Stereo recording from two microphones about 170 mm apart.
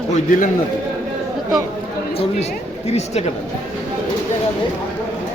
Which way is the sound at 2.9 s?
40° left (ahead or behind).